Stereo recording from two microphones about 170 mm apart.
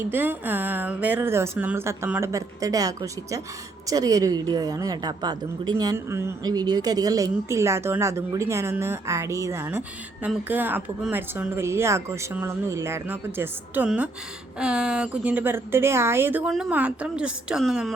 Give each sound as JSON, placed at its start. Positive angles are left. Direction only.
{"t": 0.1, "sound": "a woman's voice", "side_deg": -10}